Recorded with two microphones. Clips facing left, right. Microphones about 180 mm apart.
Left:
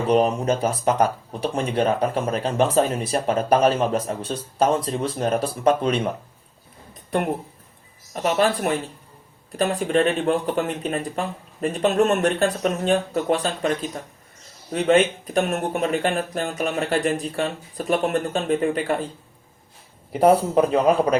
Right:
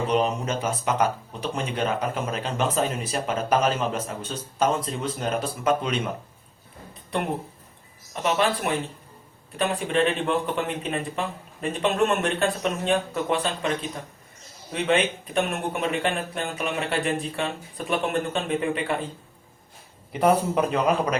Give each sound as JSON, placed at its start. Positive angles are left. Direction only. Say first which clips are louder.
{"t": 0.1, "sound": "speech", "louder": "left 8 dB", "side_deg": 35}
{"t": 8.1, "sound": "speech", "louder": "left 3 dB", "side_deg": 40}
{"t": 20.1, "sound": "speech", "louder": "left 4 dB", "side_deg": 35}